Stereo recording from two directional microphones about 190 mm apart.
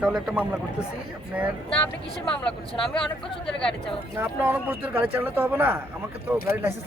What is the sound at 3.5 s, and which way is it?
Speech, 5° left (ahead or behind).